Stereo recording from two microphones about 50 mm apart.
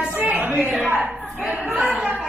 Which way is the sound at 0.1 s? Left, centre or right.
Right.